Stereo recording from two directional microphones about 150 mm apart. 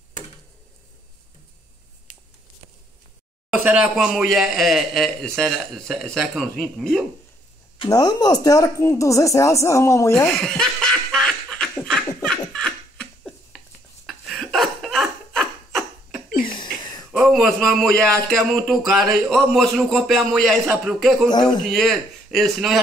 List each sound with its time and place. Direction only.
2.1 s a sound: 60° left (ahead or behind)
3.5 s speech: 10° right (ahead or behind)
7.8 s speech: 25° left (ahead or behind)
10.3 s snicker: 5° left (ahead or behind)
12.2 s laughter: 5° left (ahead or behind)
14.0 s a sound: centre (ahead or behind)
17.1 s speech: 5° right (ahead or behind)
21.3 s speech: 25° left (ahead or behind)
21.6 s speech: centre (ahead or behind)